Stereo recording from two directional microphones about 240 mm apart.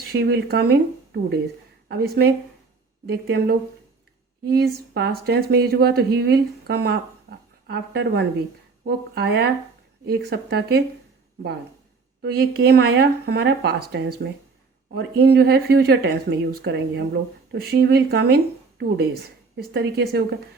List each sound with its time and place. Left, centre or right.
0.1 s speech: right
12.2 s speech: right
19.5 s speech: right